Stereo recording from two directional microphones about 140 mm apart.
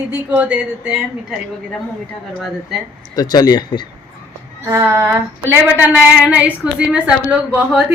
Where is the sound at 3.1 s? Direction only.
30° left (ahead or behind).